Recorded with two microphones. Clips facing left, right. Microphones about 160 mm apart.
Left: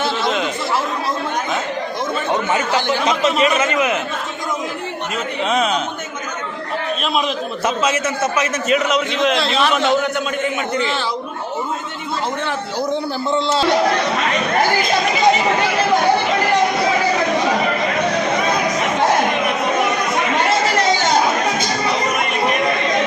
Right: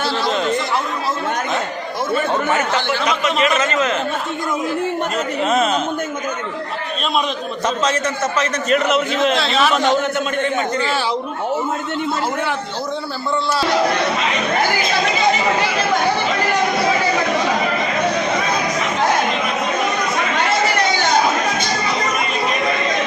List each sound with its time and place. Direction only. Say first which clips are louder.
0.3 s chatter: right 3 dB; centre (ahead or behind)
2.3 s speech: even; 15° left (ahead or behind)
8.4 s a man's voice: right 1 dB; centre (ahead or behind)
13.3 s speech: left 2 dB; 25° left (ahead or behind)